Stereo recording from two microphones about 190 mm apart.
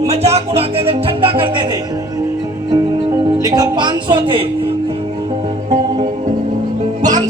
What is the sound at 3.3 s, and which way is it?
Speech, 20° right (ahead or behind).